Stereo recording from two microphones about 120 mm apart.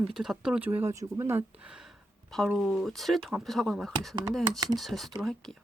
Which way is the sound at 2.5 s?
Centre (ahead or behind).